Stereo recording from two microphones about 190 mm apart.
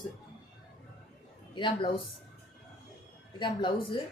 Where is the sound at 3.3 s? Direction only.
25° left (ahead or behind).